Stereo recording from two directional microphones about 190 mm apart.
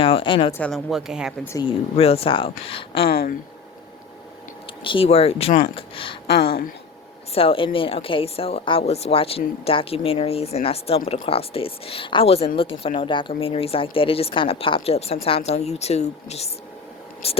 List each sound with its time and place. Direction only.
0.0 s speech: 30° left (ahead or behind)
0.5 s speech: 5° left (ahead or behind)
1.5 s speech: 30° left (ahead or behind)
3.1 s speech: 50° left (ahead or behind)
4.8 s a woman's voice: 25° left (ahead or behind)
7.3 s a woman's voice: 30° left (ahead or behind)